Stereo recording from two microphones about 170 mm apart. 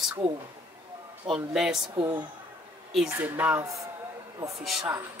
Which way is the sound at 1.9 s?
25° right (ahead or behind).